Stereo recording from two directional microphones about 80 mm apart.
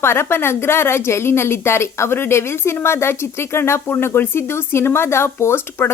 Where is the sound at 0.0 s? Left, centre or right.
Left.